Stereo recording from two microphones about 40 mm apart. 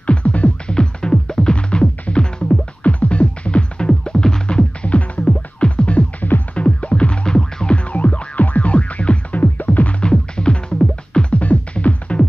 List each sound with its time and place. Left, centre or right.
0.0 s music: left
0.7 s music: left
7.7 s music: left
10.0 s music: left
11.3 s music: left